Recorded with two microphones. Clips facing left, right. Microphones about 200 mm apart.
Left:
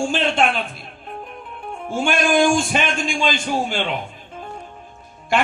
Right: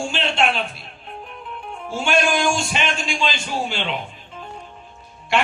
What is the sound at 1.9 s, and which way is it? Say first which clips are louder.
A man's voice: left 3 dB; 50° left (ahead or behind).